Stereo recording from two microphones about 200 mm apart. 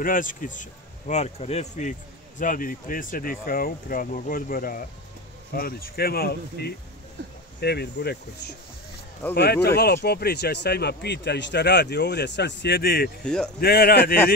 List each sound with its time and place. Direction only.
0.0 s speech: 40° left (ahead or behind)
13.2 s speech: 5° left (ahead or behind)
13.6 s speech: 50° left (ahead or behind)